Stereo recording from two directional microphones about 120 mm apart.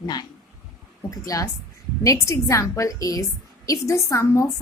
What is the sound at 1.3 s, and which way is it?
A woman's voice, 30° left (ahead or behind).